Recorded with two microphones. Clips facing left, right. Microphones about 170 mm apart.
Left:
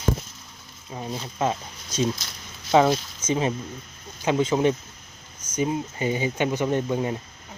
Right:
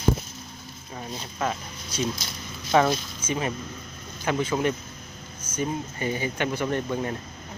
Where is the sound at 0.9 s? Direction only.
25° left (ahead or behind).